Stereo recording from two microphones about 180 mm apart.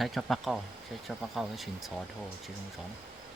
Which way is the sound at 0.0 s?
Centre (ahead or behind).